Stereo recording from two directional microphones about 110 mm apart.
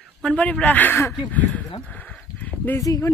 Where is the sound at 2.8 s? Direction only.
30° left (ahead or behind).